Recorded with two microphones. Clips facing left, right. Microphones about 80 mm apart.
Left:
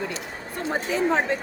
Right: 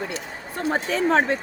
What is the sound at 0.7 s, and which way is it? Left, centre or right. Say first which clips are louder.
Speech: right 2 dB; right.